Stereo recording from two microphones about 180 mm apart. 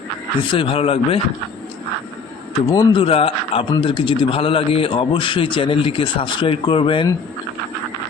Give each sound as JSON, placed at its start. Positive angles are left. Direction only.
{"t": 0.5, "sound": "speech", "side_deg": 30}
{"t": 2.6, "sound": "speech", "side_deg": 25}